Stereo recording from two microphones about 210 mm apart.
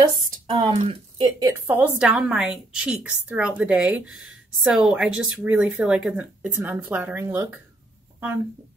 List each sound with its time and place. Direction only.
0.5 s speech: 25° right (ahead or behind)
1.4 s a woman's voice: 10° right (ahead or behind)